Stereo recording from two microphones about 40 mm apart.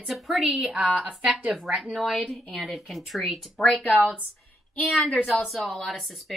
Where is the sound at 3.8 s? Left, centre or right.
Left.